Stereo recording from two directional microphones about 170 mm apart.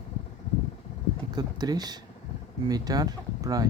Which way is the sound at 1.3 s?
25° right (ahead or behind).